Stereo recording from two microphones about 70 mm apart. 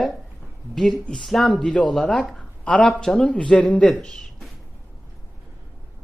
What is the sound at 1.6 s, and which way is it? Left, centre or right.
Speech, centre.